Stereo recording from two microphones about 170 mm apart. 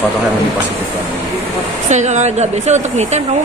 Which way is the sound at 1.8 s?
45° right (ahead or behind).